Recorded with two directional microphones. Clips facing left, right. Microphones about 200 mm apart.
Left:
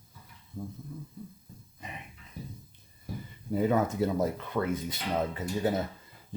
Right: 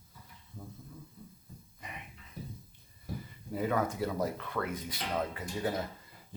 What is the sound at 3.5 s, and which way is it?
Speech, 25° left (ahead or behind).